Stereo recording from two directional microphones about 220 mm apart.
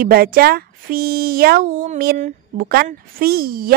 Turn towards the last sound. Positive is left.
turn(degrees=-40)  # may be behind; listen again after turning